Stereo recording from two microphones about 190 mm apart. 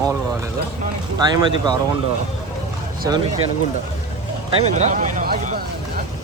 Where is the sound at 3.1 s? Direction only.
15° right (ahead or behind).